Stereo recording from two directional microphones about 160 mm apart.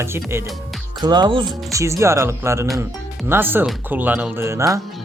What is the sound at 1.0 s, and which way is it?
Speech, 30° right (ahead or behind).